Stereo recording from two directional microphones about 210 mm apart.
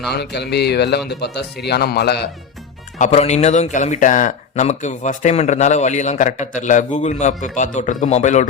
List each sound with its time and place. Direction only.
0.1 s speech: 50° left (ahead or behind)
3.0 s speech: 30° left (ahead or behind)